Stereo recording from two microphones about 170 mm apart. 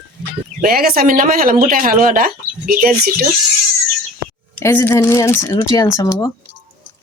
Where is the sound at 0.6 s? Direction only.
60° right (ahead or behind).